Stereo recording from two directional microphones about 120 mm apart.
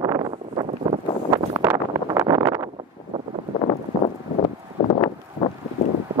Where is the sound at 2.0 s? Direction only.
30° right (ahead or behind).